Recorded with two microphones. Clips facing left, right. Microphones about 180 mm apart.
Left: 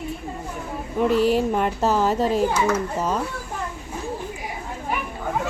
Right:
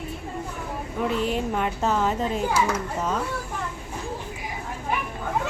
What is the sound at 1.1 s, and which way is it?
Speech, 40° left (ahead or behind).